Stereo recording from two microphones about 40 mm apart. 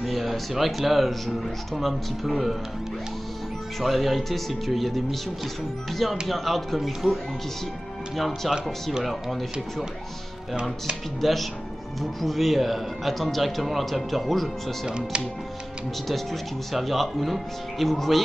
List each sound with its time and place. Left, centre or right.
0.0 s speech: centre
3.8 s speech: centre
8.5 s speech: centre
11.1 s speech: centre
14.9 s speech: right
16.7 s speech: centre